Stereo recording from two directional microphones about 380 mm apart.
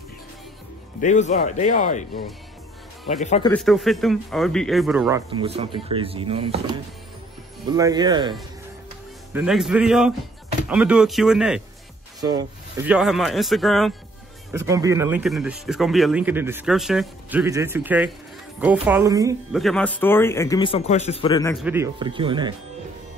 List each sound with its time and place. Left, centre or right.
1.0 s speech: centre
3.5 s speech: centre
5.3 s speech: centre
21.6 s speech: centre